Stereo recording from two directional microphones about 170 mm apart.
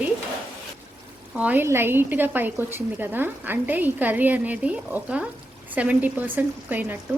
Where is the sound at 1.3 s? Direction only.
10° right (ahead or behind).